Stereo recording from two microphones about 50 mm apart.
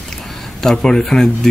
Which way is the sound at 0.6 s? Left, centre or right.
Centre.